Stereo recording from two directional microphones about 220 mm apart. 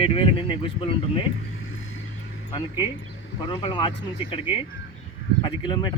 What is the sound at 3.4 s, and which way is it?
Speech, 20° left (ahead or behind).